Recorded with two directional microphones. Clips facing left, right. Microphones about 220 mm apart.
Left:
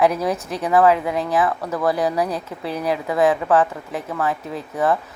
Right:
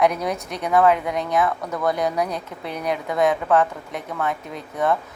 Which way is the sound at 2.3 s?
30° left (ahead or behind).